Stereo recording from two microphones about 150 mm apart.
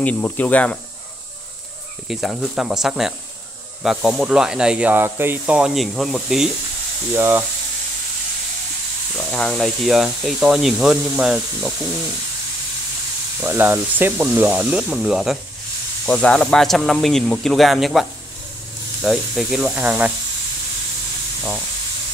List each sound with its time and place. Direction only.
0.0 s speech: 10° left (ahead or behind)
2.0 s speech: centre (ahead or behind)
7.2 s speech: 15° right (ahead or behind)
9.1 s speech: 5° left (ahead or behind)
13.4 s speech: 15° right (ahead or behind)
16.1 s speech: 5° left (ahead or behind); by 20.1 s 10° right (ahead or behind)